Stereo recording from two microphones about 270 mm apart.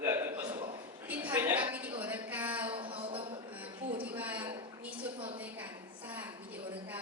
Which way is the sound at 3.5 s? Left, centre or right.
Centre.